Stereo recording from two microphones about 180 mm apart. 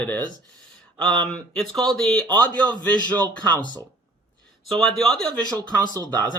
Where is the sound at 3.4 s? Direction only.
25° right (ahead or behind).